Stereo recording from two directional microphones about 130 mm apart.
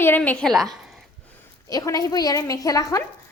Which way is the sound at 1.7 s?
30° left (ahead or behind).